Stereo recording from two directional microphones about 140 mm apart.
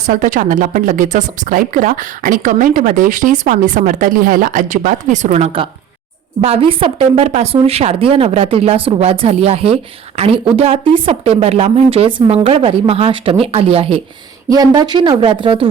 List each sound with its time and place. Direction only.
0.0 s a woman's voice: 65° right (ahead or behind); by 14.0 s 45° right (ahead or behind)
14.5 s speech: 30° right (ahead or behind)